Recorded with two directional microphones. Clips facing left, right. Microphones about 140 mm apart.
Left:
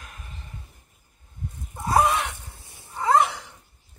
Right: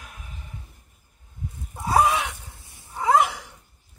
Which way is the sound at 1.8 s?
Centre (ahead or behind).